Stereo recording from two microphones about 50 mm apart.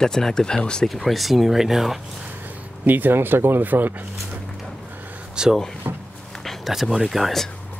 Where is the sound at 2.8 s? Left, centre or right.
Right.